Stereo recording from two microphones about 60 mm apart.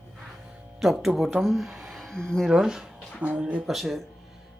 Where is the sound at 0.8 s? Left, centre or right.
Centre.